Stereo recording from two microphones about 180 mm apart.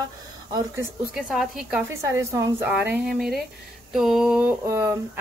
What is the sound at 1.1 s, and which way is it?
Speech, centre (ahead or behind).